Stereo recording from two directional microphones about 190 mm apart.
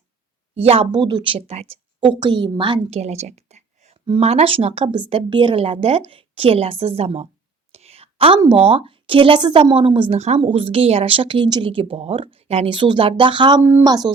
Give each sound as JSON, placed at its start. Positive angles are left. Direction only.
{"t": 0.5, "sound": "speech", "side_deg": -30}
{"t": 7.7, "sound": "whispering", "side_deg": -35}
{"t": 8.4, "sound": "speech", "side_deg": -30}
{"t": 13.6, "sound": "speech", "side_deg": -10}